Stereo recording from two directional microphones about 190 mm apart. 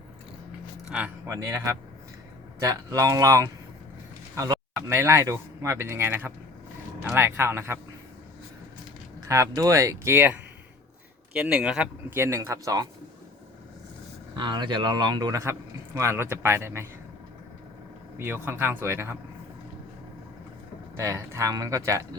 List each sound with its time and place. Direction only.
0.9 s speech: 5° right (ahead or behind)
2.6 s speech: 15° right (ahead or behind)
9.2 s speech: 15° right (ahead or behind)
14.3 s speech: 25° right (ahead or behind)
18.2 s speech: 10° right (ahead or behind)
20.9 s speech: 15° right (ahead or behind)